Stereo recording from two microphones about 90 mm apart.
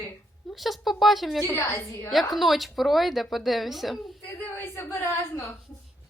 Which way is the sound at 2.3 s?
Centre (ahead or behind).